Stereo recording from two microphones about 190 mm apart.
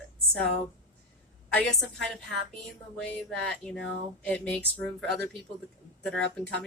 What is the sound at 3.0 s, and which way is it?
Speech, 5° left (ahead or behind).